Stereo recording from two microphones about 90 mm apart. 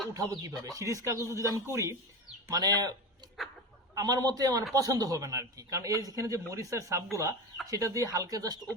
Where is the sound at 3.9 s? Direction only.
45° right (ahead or behind).